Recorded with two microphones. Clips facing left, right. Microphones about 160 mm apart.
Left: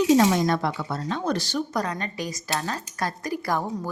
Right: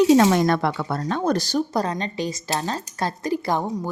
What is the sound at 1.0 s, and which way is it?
Speech, 45° right (ahead or behind).